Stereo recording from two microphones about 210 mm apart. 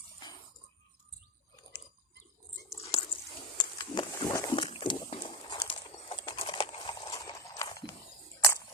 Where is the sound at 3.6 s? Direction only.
20° left (ahead or behind).